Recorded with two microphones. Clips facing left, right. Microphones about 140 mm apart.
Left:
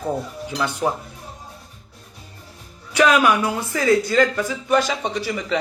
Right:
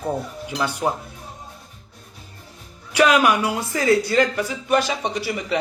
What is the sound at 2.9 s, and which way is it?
Speech, 15° right (ahead or behind).